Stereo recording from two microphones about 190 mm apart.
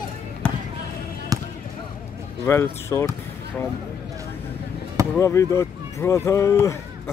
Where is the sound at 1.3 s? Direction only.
20° right (ahead or behind).